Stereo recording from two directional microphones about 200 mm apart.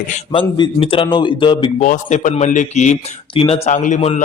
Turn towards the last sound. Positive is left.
turn(degrees=35)  # may be behind; listen again after turning